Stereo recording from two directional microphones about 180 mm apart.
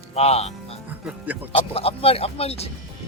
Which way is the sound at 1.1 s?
10° right (ahead or behind).